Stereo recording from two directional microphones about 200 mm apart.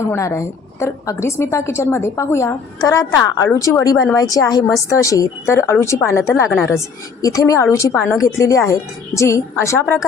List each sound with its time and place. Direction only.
0.0 s a woman's voice: 15° left (ahead or behind)